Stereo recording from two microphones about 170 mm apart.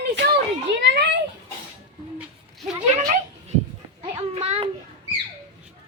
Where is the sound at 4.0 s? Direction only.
40° right (ahead or behind).